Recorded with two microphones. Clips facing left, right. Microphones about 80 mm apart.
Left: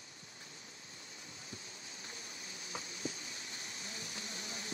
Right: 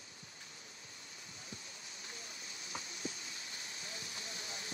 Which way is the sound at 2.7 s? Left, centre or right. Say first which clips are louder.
Left 2 dB; left.